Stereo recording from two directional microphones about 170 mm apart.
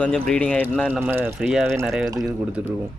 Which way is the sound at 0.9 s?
10° right (ahead or behind).